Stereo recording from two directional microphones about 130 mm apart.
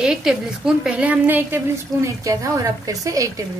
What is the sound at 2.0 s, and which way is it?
Speech, 25° right (ahead or behind).